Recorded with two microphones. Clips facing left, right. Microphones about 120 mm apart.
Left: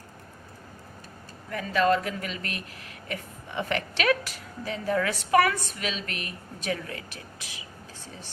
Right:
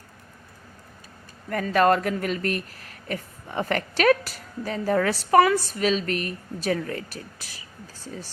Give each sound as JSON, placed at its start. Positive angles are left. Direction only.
{"t": 1.5, "sound": "a woman's voice", "side_deg": -50}